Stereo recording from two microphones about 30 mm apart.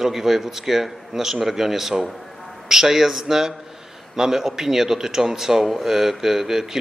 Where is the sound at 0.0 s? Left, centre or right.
Centre.